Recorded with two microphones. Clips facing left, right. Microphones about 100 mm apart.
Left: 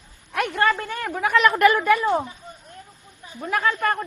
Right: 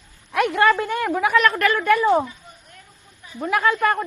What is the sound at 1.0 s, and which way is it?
Speech, 5° right (ahead or behind).